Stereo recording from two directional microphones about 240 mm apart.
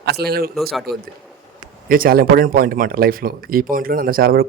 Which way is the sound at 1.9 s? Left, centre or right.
Right.